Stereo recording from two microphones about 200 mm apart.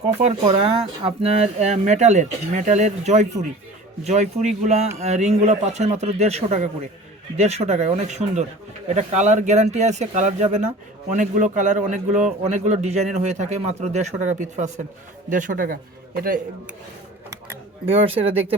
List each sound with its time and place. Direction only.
0.2 s a man's voice: 35° right (ahead or behind)
17.8 s speech: 30° right (ahead or behind)